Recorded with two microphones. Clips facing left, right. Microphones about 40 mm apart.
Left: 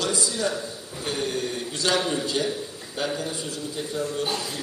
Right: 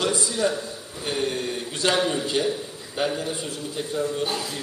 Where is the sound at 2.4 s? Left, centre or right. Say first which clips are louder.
Right 3 dB; right.